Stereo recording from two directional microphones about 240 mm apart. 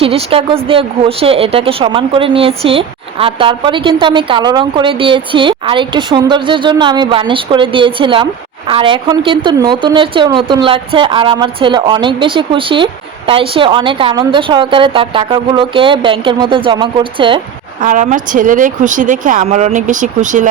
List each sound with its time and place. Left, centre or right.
0.0 s a woman's voice: right
17.8 s speech: right